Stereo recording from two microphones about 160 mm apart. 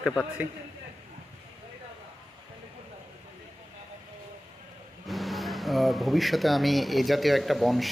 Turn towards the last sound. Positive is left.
turn(degrees=0)  # may be behind; listen again after turning